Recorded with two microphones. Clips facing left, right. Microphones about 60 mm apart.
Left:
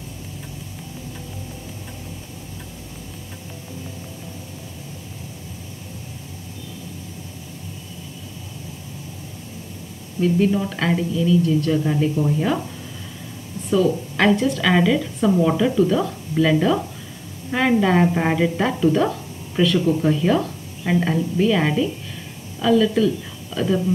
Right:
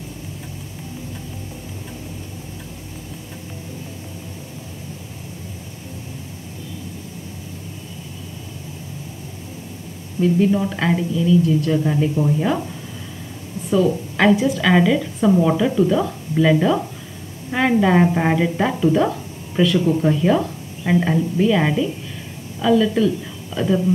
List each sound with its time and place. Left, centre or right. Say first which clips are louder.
10.2 s a woman's voice: right 2 dB; centre
13.7 s a woman's voice: right 1 dB; centre